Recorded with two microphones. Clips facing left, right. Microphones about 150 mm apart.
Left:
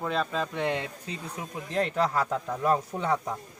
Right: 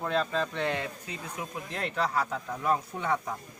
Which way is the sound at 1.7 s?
40° left (ahead or behind).